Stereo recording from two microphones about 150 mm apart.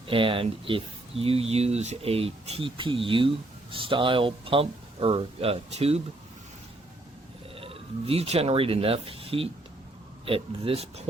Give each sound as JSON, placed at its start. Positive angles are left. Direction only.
{"t": 0.1, "sound": "speech", "side_deg": -35}
{"t": 7.5, "sound": "speech", "side_deg": -40}